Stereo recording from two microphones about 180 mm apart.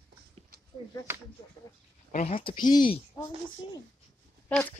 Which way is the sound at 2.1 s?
45° left (ahead or behind).